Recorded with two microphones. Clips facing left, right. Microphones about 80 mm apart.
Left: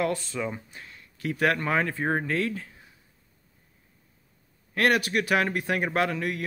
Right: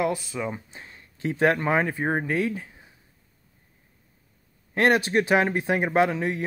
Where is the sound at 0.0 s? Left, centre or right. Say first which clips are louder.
Right 2 dB; centre.